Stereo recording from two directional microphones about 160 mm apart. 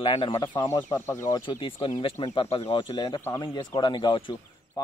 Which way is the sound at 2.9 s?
25° left (ahead or behind).